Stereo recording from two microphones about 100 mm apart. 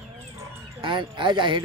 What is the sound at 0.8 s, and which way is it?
Speech, 55° right (ahead or behind).